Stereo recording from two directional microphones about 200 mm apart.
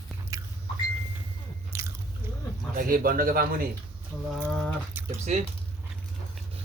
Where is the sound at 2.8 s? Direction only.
45° right (ahead or behind).